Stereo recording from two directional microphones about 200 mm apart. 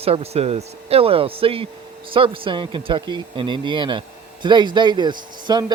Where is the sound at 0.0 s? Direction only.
30° right (ahead or behind).